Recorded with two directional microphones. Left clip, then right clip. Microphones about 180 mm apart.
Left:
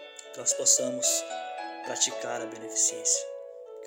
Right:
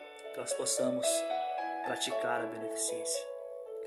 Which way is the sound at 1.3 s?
40° left (ahead or behind).